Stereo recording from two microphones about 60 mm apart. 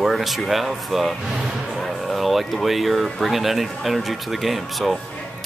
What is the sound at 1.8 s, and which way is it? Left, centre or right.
Speech, centre.